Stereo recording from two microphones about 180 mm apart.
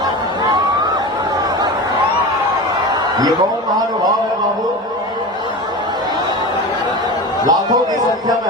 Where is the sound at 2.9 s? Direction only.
20° right (ahead or behind).